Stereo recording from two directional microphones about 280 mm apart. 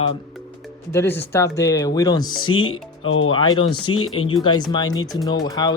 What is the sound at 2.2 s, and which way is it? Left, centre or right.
Speech, left.